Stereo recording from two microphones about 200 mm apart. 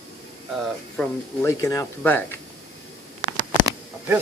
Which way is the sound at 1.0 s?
15° left (ahead or behind).